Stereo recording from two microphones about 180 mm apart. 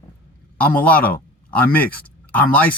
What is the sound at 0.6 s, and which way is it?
A man's voice, 10° left (ahead or behind).